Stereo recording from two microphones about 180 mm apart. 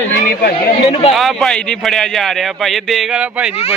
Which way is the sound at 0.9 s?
30° left (ahead or behind).